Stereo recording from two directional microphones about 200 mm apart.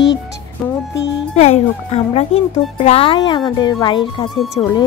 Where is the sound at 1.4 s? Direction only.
30° left (ahead or behind).